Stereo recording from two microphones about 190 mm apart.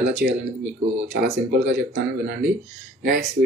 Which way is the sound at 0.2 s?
55° right (ahead or behind).